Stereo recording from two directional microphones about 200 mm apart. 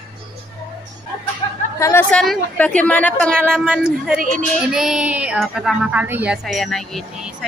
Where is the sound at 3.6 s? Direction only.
5° right (ahead or behind).